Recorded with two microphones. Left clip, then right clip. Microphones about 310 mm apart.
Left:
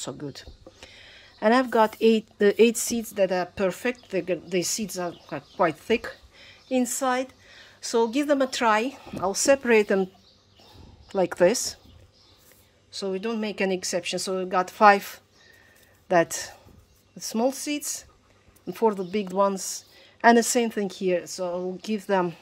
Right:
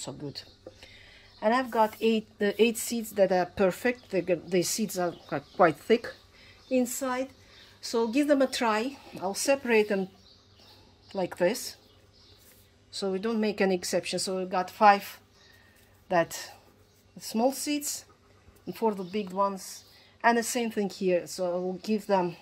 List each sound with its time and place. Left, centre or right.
0.0 s a woman's voice: centre
11.1 s a woman's voice: centre
12.9 s a woman's voice: centre